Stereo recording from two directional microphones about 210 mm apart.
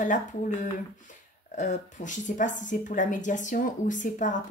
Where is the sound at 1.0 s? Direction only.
35° left (ahead or behind).